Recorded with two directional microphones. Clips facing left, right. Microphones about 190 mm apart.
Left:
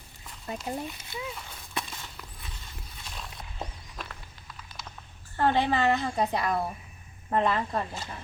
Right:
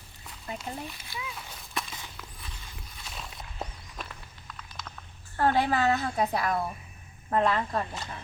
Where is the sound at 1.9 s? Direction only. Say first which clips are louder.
Even; 5° right (ahead or behind).